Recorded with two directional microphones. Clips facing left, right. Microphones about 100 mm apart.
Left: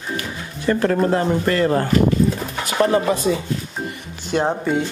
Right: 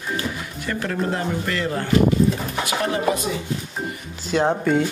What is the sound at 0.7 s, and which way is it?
Speech, 40° left (ahead or behind).